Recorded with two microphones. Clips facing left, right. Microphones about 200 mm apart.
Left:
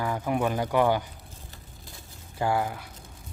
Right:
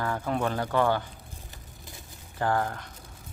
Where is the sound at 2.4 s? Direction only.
10° left (ahead or behind).